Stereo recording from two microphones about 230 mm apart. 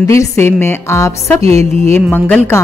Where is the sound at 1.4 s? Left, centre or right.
Right.